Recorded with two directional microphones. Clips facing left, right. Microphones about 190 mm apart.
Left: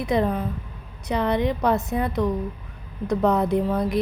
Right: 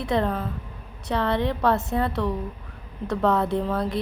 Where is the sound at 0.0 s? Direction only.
15° left (ahead or behind).